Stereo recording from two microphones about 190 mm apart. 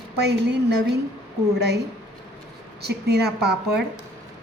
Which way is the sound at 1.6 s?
60° right (ahead or behind).